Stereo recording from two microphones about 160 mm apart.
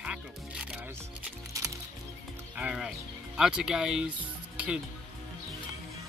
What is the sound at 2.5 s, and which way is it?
Speech, 5° right (ahead or behind).